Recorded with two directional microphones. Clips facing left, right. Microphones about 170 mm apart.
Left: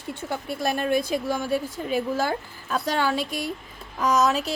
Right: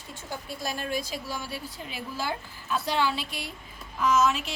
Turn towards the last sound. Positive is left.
turn(degrees=40)  # may be behind; listen again after turning